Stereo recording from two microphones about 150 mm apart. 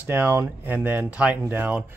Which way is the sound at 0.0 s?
15° right (ahead or behind).